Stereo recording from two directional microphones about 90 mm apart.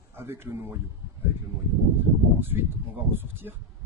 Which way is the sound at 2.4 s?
25° right (ahead or behind).